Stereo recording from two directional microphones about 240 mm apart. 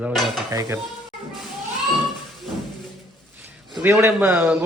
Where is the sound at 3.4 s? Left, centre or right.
Centre.